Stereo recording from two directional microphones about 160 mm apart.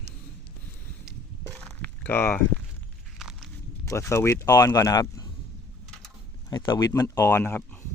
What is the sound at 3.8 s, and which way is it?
Speech, 15° left (ahead or behind).